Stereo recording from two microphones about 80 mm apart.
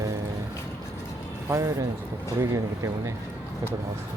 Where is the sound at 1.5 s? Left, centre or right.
Right.